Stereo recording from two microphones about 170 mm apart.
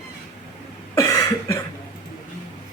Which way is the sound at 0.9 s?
20° left (ahead or behind).